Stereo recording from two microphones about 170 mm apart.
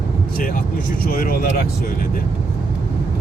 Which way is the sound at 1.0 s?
60° left (ahead or behind).